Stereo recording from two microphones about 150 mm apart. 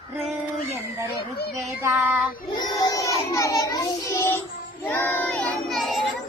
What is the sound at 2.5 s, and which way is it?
Child singing, 30° left (ahead or behind).